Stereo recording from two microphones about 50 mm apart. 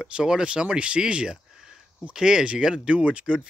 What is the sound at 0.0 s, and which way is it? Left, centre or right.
Speech, centre.